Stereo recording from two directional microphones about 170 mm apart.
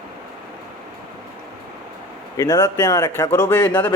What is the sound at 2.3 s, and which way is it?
A man's voice, 25° left (ahead or behind).